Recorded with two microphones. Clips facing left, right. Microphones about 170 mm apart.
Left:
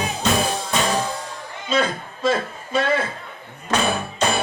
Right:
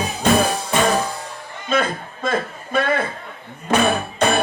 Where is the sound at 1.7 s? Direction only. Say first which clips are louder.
Right 1 dB; 55° right (ahead or behind).